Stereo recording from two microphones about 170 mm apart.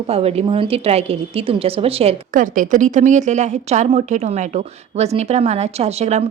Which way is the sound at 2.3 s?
50° right (ahead or behind).